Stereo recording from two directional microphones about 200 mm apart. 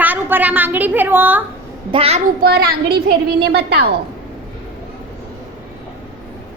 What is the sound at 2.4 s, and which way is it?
A child's voice, 50° right (ahead or behind).